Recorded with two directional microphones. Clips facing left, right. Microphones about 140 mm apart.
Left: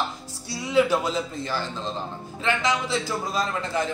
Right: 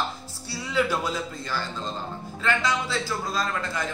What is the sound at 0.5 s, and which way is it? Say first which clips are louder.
A man's voice: left 5 dB; 20° left (ahead or behind).